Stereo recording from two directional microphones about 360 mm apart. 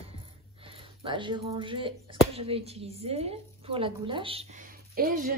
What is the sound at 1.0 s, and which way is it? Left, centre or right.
A woman's voice, centre.